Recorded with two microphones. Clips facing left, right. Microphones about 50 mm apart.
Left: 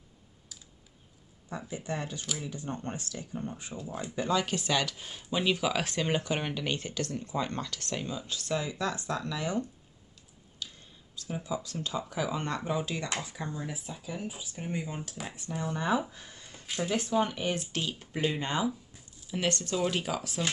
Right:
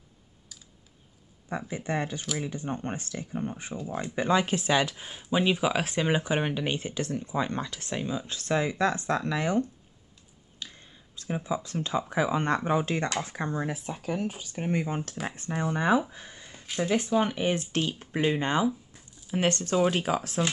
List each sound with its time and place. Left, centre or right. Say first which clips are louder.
1.7 s speech: right 5 dB; right
8.3 s speech: right 5 dB; right
10.6 s a sound: right 1 dB; right
11.1 s speech: right 4 dB; right
16.1 s a sound: right 3 dB; right
16.7 s speech: right 3 dB; centre
17.4 s speech: right 5 dB; right